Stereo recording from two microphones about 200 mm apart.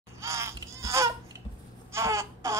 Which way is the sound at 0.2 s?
15° right (ahead or behind).